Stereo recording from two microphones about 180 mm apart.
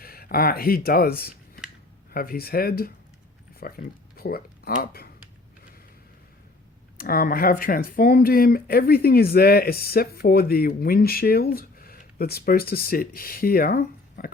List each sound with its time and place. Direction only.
0.0 s speech: 55° left (ahead or behind)
6.9 s speech: 55° left (ahead or behind)